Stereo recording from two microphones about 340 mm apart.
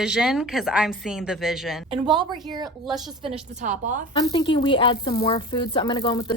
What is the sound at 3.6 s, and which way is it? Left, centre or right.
Speech, right.